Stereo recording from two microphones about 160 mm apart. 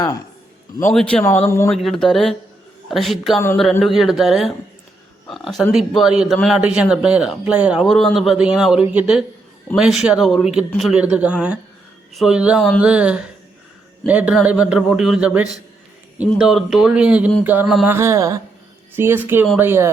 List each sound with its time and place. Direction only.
0.8 s speech: 10° left (ahead or behind)
1.7 s a man's voice: centre (ahead or behind); by 19.9 s 15° right (ahead or behind)